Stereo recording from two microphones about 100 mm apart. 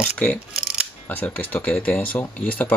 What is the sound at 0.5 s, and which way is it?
Scissors, 5° right (ahead or behind).